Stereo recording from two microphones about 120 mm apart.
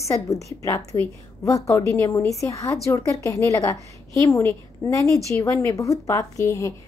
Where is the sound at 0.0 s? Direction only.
25° left (ahead or behind).